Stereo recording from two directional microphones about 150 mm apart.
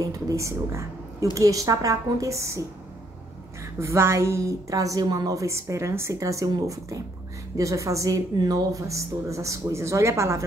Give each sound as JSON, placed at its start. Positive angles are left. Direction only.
{"t": 0.0, "sound": "a woman's voice", "side_deg": -20}
{"t": 3.8, "sound": "a woman's voice", "side_deg": -20}